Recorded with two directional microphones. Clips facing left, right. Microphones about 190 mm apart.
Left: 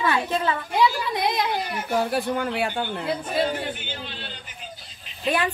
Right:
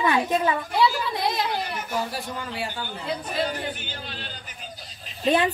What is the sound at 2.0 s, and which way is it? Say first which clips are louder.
Speech: left 8 dB; 60° left (ahead or behind).